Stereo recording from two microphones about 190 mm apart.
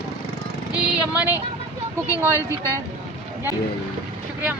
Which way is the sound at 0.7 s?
10° right (ahead or behind).